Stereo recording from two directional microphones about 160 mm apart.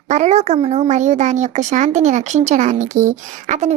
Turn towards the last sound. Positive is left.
turn(degrees=-50)  # may be behind; listen again after turning